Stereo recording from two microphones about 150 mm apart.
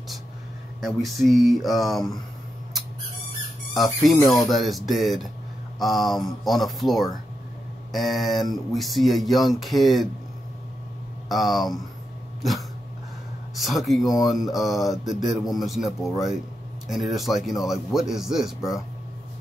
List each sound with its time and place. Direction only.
0.7 s speech: centre (ahead or behind)
3.7 s speech: centre (ahead or behind)
4.1 s speech: 25° left (ahead or behind)
4.5 s speech: centre (ahead or behind)
11.2 s speech: centre (ahead or behind)
13.6 s speech: centre (ahead or behind)
14.0 s speech: 25° left (ahead or behind)
14.4 s speech: centre (ahead or behind)